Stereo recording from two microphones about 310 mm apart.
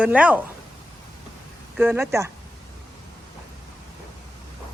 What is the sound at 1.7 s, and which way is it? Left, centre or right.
Speech, centre.